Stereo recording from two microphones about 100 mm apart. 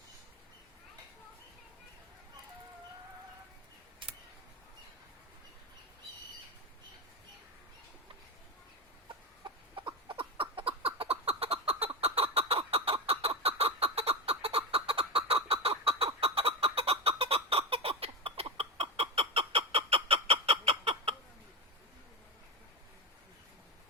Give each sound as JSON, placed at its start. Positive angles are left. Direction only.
{"t": 4.0, "sound": "a sound", "side_deg": -60}
{"t": 9.0, "sound": "chicken", "side_deg": -50}
{"t": 11.9, "sound": "fowl", "side_deg": -75}